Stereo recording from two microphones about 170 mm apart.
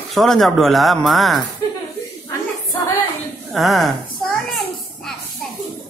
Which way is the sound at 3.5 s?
Centre (ahead or behind).